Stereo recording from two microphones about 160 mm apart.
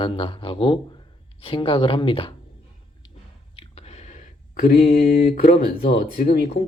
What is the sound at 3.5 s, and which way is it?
Speech, 40° left (ahead or behind).